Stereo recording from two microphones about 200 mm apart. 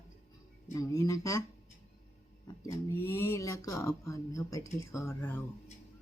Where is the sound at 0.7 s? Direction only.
15° left (ahead or behind).